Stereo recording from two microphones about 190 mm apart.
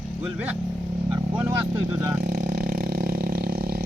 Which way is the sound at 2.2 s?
45° right (ahead or behind).